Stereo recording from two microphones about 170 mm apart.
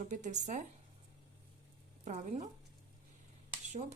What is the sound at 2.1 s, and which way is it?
Speech, 40° right (ahead or behind).